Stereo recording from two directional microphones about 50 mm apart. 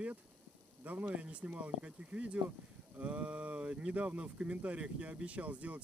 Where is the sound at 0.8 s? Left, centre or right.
Right.